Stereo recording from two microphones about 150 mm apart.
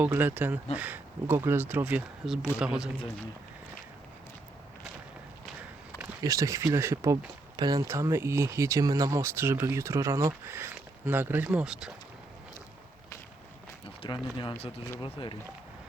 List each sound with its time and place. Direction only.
0.0 s speech: 15° right (ahead or behind)
6.0 s speech: 20° right (ahead or behind); by 11.9 s 5° right (ahead or behind)
14.0 s speech: 35° left (ahead or behind)